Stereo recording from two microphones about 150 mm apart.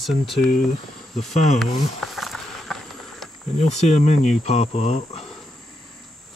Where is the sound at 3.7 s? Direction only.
50° left (ahead or behind).